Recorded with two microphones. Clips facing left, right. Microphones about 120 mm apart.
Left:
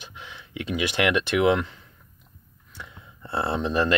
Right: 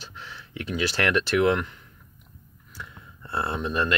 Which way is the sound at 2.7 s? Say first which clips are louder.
Right 1 dB; 25° left (ahead or behind).